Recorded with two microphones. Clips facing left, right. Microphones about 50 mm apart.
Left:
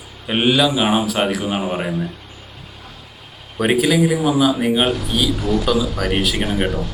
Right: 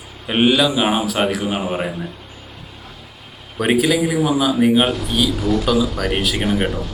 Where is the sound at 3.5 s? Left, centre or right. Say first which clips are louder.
Left 1 dB; centre.